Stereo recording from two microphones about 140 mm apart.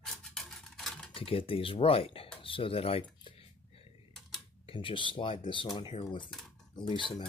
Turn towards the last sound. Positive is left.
turn(degrees=35)  # may be behind; listen again after turning